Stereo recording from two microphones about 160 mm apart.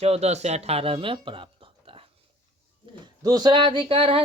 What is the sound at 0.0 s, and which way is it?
Speech, 40° right (ahead or behind).